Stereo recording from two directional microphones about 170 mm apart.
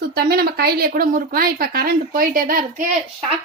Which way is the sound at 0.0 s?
70° right (ahead or behind).